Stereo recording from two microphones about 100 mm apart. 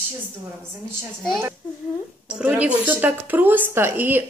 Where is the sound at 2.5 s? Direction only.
15° right (ahead or behind).